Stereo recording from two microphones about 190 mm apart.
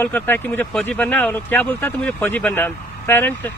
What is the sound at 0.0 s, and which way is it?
Speech, 10° left (ahead or behind).